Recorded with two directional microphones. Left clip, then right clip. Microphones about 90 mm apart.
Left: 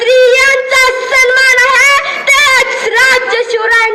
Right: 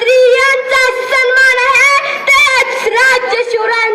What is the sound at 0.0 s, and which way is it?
Music, 25° right (ahead or behind).